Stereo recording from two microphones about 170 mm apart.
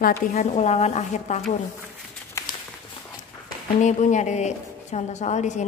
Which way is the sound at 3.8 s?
45° left (ahead or behind).